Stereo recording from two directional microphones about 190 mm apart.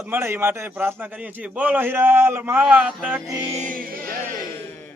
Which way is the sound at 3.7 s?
45° right (ahead or behind).